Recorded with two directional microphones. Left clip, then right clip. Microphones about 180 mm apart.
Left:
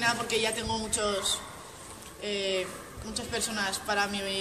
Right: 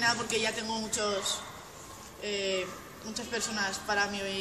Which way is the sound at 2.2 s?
15° left (ahead or behind).